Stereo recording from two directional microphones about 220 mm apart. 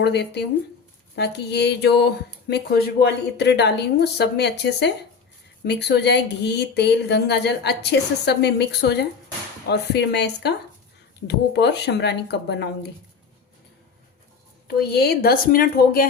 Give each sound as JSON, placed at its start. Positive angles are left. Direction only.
{"t": 0.0, "sound": "speech", "side_deg": 50}
{"t": 14.8, "sound": "speech", "side_deg": 45}